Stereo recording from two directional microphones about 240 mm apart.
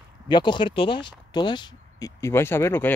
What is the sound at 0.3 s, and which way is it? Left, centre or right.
Speech, centre.